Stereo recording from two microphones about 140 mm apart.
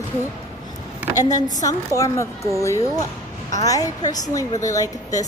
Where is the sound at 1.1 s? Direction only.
25° left (ahead or behind).